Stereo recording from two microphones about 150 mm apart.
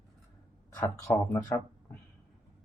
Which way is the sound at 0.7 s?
20° left (ahead or behind).